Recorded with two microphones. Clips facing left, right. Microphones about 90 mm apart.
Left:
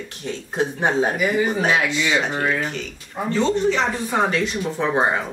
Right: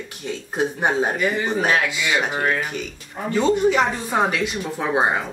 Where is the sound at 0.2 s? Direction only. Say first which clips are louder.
Even; 5° right (ahead or behind).